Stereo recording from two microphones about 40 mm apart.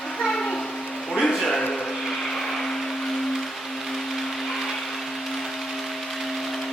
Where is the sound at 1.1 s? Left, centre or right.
Centre.